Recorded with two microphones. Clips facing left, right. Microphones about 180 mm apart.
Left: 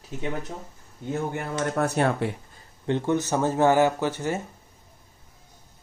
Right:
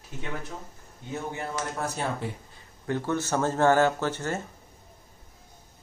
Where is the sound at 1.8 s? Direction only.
65° left (ahead or behind).